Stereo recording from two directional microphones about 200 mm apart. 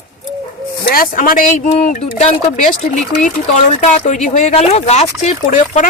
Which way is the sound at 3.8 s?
40° left (ahead or behind).